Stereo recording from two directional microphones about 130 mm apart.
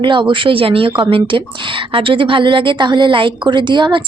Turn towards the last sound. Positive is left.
turn(degrees=-35)  # may be behind; listen again after turning